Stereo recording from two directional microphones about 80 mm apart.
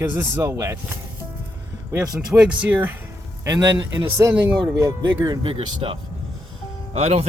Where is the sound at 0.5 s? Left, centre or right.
Right.